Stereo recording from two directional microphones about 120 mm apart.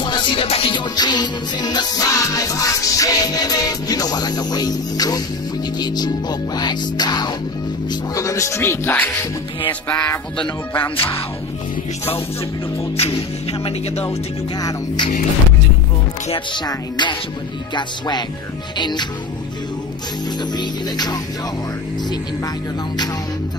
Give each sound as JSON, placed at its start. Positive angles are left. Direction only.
{"t": 0.0, "sound": "music", "side_deg": 40}
{"t": 7.9, "sound": "speech", "side_deg": 30}
{"t": 9.8, "sound": "music", "side_deg": 10}
{"t": 10.3, "sound": "speech", "side_deg": 45}
{"t": 12.9, "sound": "music", "side_deg": 55}
{"t": 14.6, "sound": "music", "side_deg": 30}
{"t": 16.5, "sound": "music", "side_deg": 40}
{"t": 20.5, "sound": "music", "side_deg": 35}